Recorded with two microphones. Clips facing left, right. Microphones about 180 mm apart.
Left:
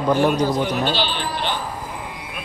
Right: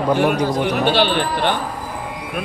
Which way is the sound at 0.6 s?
55° right (ahead or behind).